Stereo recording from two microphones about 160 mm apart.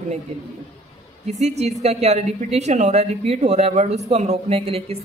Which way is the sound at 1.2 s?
45° right (ahead or behind).